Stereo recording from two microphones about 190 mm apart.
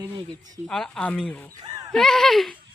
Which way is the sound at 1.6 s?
20° right (ahead or behind).